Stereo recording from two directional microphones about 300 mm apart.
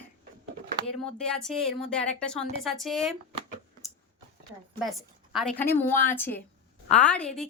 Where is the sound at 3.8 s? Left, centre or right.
Centre.